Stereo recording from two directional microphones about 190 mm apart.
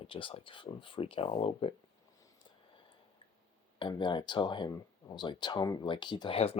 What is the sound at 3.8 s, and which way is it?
Speech, 25° left (ahead or behind).